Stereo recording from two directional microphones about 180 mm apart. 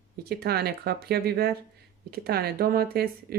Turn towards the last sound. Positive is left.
turn(degrees=-55)  # may be behind; listen again after turning